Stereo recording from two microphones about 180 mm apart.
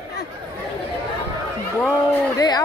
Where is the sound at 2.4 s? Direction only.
20° left (ahead or behind).